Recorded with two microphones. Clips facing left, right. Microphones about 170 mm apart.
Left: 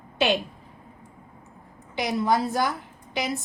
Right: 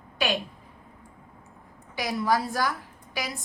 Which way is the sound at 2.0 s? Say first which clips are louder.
Left 2 dB; 20° left (ahead or behind).